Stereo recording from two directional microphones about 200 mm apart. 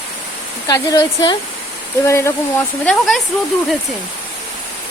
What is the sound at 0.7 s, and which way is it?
Speech, 20° left (ahead or behind).